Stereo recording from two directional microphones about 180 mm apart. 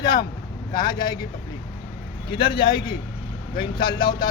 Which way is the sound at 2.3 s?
30° left (ahead or behind).